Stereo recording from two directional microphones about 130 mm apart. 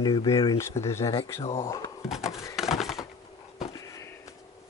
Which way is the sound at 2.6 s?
Centre (ahead or behind).